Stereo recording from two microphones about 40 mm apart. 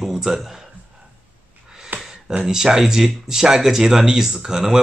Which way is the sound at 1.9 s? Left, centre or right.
Right.